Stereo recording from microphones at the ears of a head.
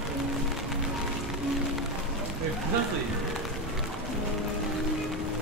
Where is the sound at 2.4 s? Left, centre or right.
Right.